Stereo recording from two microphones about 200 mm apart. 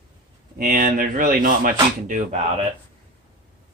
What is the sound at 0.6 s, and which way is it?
Speech, 45° right (ahead or behind).